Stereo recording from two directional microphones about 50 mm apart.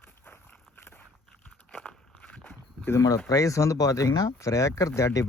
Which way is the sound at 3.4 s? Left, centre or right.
Left.